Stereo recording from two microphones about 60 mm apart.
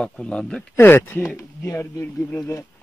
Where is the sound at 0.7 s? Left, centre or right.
Left.